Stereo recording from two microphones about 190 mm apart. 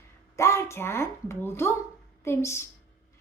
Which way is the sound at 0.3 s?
15° left (ahead or behind).